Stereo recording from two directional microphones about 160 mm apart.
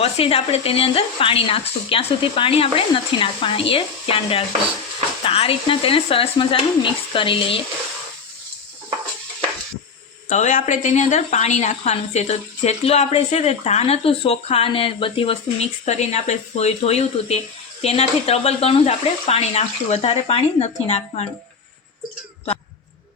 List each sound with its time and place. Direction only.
0.0 s speech: 40° left (ahead or behind)
10.2 s a woman's voice: 50° left (ahead or behind)